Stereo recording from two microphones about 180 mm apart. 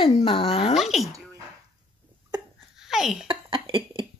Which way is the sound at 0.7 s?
Centre (ahead or behind).